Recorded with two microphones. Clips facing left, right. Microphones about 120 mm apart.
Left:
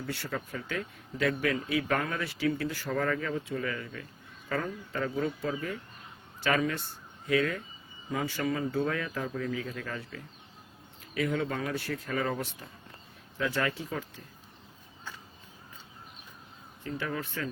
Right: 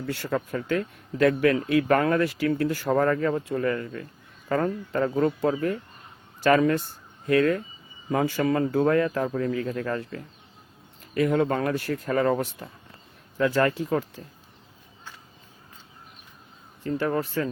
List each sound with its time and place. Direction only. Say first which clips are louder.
0.0 s speech: right 7 dB; 50° right (ahead or behind)
5.2 s speech: right 9 dB; 60° right (ahead or behind)
6.6 s speech: right 9 dB; 50° right (ahead or behind)
16.8 s speech: right 9 dB; 40° right (ahead or behind)